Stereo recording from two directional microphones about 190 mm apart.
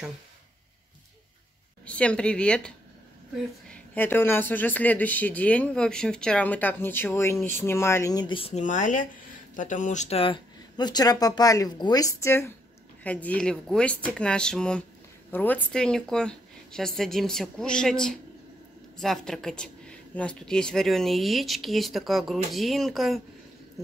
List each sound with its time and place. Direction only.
1.9 s a woman's voice: 5° left (ahead or behind)